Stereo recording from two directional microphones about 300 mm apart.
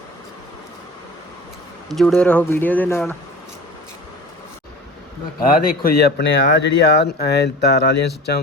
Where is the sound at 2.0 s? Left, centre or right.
Centre.